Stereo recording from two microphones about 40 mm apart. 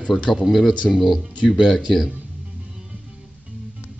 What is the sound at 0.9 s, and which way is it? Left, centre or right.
Speech, centre.